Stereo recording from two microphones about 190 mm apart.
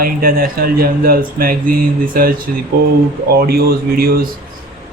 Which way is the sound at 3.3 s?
55° right (ahead or behind).